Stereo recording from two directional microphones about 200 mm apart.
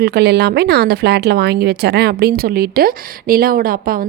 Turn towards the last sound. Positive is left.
turn(degrees=-45)  # may be behind; listen again after turning